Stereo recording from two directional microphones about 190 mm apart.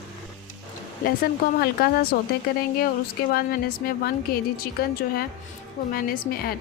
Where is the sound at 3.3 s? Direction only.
50° left (ahead or behind).